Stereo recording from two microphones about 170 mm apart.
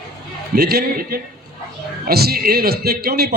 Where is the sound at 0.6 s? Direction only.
65° right (ahead or behind).